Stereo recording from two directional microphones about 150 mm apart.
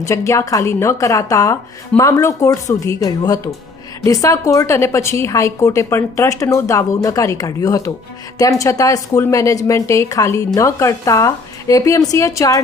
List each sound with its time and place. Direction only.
0.0 s a woman's voice: 20° left (ahead or behind)